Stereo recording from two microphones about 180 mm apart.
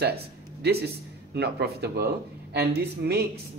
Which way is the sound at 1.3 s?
65° right (ahead or behind).